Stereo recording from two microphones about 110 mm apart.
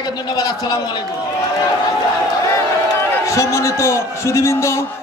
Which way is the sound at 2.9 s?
20° left (ahead or behind).